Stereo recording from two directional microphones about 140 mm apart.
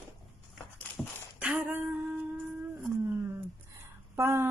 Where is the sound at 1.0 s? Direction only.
5° left (ahead or behind).